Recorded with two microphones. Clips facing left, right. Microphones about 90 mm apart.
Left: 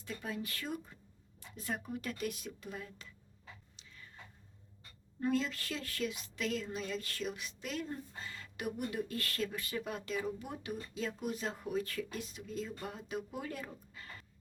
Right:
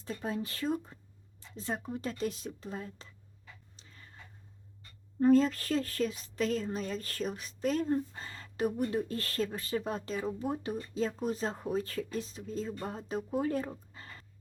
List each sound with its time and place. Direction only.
0.0 s a woman's voice: 30° right (ahead or behind)
3.8 s a sound: 40° right (ahead or behind)
5.2 s a woman's voice: 40° right (ahead or behind)